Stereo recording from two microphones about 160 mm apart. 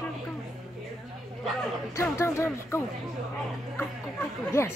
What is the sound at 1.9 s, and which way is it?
Speech, 20° left (ahead or behind).